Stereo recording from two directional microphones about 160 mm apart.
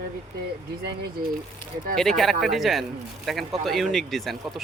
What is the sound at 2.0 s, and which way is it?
Speech, centre (ahead or behind).